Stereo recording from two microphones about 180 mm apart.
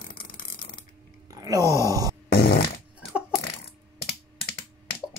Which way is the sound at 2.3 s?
60° left (ahead or behind).